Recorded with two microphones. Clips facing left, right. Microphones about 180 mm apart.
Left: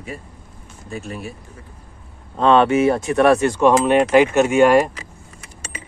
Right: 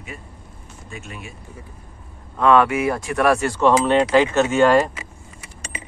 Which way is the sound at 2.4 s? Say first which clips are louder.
Left 2 dB; 30° left (ahead or behind).